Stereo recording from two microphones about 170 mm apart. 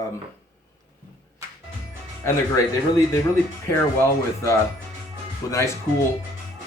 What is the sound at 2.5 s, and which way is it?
Speech, 20° left (ahead or behind).